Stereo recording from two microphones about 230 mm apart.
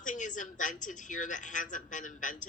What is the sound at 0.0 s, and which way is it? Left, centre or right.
Speech, left.